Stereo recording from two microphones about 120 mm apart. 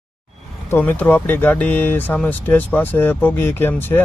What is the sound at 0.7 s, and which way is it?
Speech, 15° left (ahead or behind).